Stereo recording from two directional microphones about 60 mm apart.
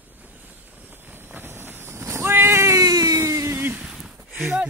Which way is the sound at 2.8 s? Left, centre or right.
Right.